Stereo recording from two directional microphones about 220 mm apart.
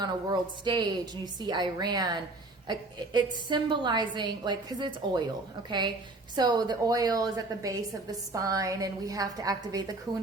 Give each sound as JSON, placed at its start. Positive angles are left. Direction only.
{"t": 0.0, "sound": "a woman's voice", "side_deg": -20}
{"t": 6.3, "sound": "a woman's voice", "side_deg": -20}